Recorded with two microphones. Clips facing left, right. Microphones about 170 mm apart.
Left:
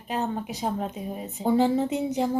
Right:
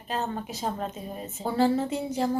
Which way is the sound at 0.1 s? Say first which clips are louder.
Left 2 dB; 10° left (ahead or behind).